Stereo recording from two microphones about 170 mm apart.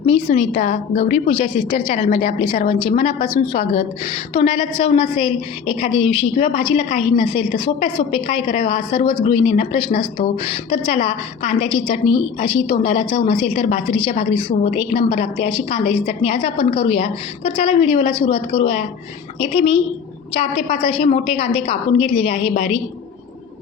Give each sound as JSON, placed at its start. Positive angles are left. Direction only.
{"t": 0.0, "sound": "a woman's voice", "side_deg": 35}
{"t": 1.3, "sound": "a woman's voice", "side_deg": 30}
{"t": 2.0, "sound": "a woman's voice", "side_deg": 50}
{"t": 2.4, "sound": "a woman's voice", "side_deg": 30}
{"t": 19.4, "sound": "a woman's voice", "side_deg": 35}